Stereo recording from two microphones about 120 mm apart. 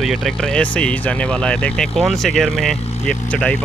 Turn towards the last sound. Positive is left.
turn(degrees=10)  # may be behind; listen again after turning